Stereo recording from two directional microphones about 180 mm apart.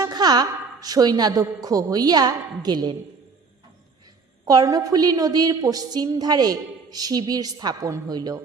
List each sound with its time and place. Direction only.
0.0 s a woman's voice: 20° right (ahead or behind)
4.4 s a woman's voice: 20° right (ahead or behind)